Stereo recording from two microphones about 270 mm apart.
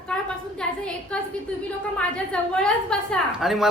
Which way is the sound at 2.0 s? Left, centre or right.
Centre.